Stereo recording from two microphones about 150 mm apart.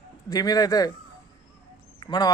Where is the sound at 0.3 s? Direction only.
25° left (ahead or behind).